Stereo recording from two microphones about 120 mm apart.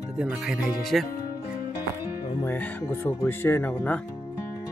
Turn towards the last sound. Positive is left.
turn(degrees=15)  # may be behind; listen again after turning